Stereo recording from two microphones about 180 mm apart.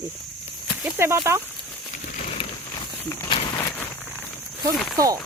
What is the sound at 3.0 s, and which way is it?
Walk, 15° left (ahead or behind).